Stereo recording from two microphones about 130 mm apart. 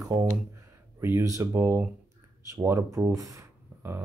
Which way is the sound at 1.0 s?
20° right (ahead or behind).